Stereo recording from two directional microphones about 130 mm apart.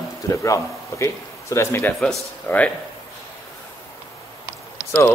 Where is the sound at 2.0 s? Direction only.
10° left (ahead or behind).